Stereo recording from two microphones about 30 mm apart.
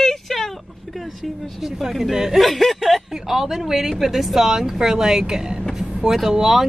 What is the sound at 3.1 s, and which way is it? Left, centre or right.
A woman's voice, centre.